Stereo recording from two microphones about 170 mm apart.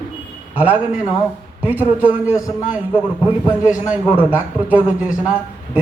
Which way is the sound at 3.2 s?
10° right (ahead or behind).